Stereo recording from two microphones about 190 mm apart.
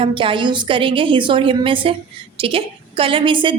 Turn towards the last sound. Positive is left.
turn(degrees=-25)  # may be behind; listen again after turning